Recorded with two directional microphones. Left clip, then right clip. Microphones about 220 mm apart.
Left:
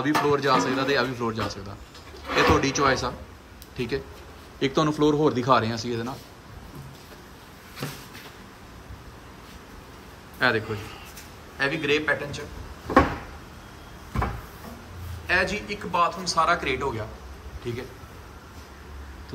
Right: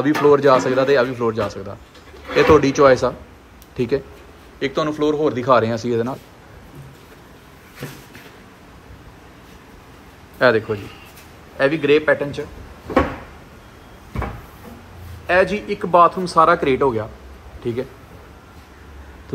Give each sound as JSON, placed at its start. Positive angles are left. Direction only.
{"t": 0.0, "sound": "speech", "side_deg": 10}
{"t": 4.6, "sound": "speech", "side_deg": 20}
{"t": 10.4, "sound": "a man's voice", "side_deg": 5}
{"t": 15.2, "sound": "a man's voice", "side_deg": 5}